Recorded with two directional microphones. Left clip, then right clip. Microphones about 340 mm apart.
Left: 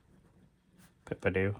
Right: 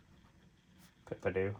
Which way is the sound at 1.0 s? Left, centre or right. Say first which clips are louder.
Left 4 dB; left.